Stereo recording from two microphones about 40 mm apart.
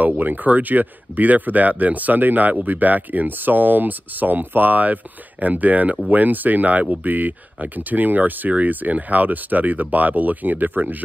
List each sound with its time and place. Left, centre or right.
0.0 s speech: right